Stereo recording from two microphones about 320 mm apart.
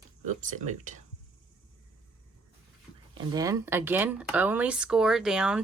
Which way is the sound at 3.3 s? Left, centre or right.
Centre.